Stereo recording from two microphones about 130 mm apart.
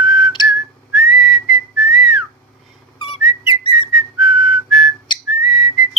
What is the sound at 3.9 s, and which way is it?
Whistling, centre (ahead or behind).